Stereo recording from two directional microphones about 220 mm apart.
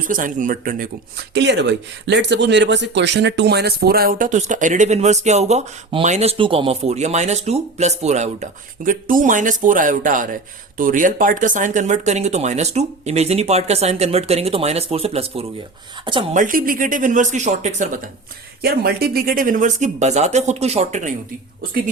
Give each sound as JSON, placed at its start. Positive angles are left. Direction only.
{"t": 0.1, "sound": "speech", "side_deg": -35}
{"t": 1.3, "sound": "speech", "side_deg": -50}
{"t": 16.3, "sound": "speech", "side_deg": -35}
{"t": 18.6, "sound": "speech", "side_deg": -45}